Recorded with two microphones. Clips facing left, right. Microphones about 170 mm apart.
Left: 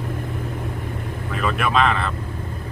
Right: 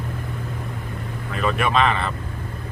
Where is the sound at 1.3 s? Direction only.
Centre (ahead or behind).